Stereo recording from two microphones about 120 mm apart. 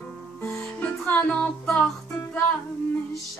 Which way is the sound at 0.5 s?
5° left (ahead or behind).